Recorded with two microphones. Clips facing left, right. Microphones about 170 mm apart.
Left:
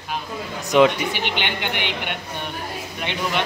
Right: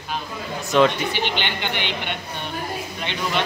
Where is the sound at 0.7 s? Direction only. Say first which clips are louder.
Left 2 dB; 15° left (ahead or behind).